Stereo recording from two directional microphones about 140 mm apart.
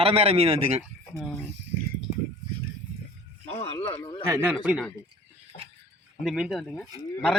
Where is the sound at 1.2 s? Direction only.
5° left (ahead or behind).